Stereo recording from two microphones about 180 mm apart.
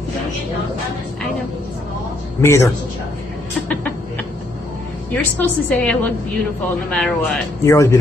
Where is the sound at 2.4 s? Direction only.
15° left (ahead or behind).